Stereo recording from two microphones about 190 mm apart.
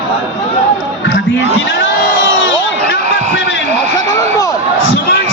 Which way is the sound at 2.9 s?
70° left (ahead or behind).